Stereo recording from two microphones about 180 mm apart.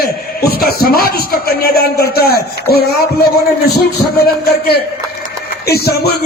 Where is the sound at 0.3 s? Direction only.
60° left (ahead or behind).